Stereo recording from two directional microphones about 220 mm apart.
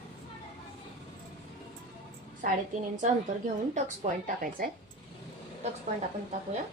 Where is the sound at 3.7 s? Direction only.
35° right (ahead or behind).